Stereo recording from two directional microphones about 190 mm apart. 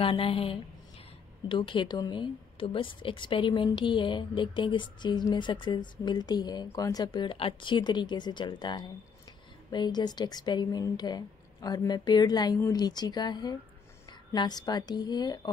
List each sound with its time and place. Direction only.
0.0 s a woman's voice: 30° left (ahead or behind)